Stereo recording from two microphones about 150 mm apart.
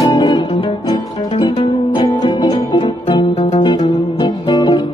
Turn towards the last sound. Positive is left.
turn(degrees=30)  # may be behind; listen again after turning